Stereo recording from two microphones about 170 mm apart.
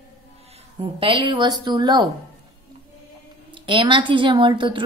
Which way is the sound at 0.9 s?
30° right (ahead or behind).